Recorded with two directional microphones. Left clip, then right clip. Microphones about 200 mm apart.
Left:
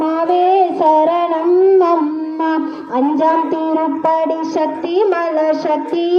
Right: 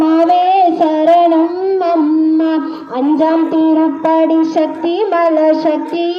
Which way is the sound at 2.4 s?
45° left (ahead or behind).